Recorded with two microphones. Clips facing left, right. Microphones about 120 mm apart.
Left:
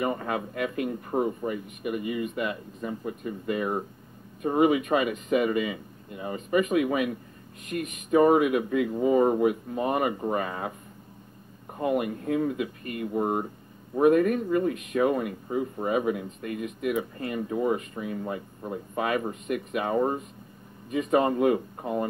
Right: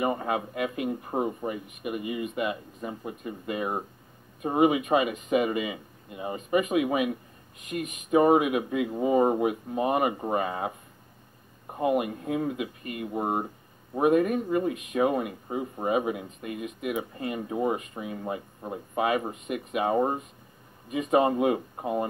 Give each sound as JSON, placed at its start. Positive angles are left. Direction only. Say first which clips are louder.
{"t": 0.0, "sound": "speech", "louder": "right 1 dB", "side_deg": -20}
{"t": 11.7, "sound": "speech", "louder": "right 1 dB", "side_deg": -20}